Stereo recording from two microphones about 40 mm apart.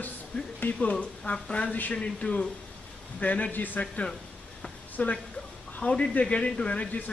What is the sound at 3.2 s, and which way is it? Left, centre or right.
Speech, left.